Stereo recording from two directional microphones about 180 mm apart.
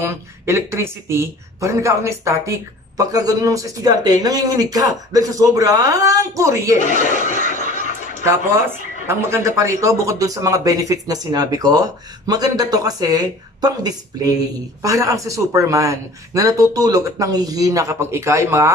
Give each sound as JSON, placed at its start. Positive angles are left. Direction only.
{"t": 0.0, "sound": "speech", "side_deg": -15}
{"t": 6.8, "sound": "chuckle", "side_deg": 45}
{"t": 8.2, "sound": "speech", "side_deg": -15}